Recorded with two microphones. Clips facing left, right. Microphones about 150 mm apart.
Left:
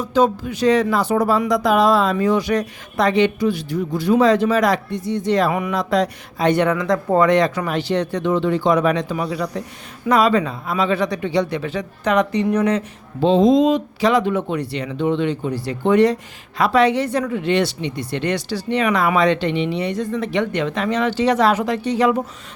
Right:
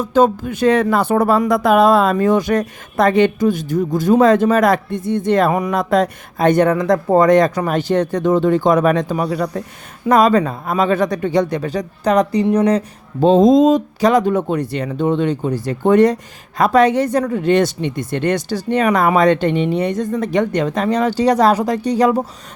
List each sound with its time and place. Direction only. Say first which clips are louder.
0.0 s speech: right 3 dB; 50° right (ahead or behind)